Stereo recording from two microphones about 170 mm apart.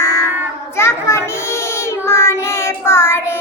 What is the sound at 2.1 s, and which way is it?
Child singing, 15° left (ahead or behind).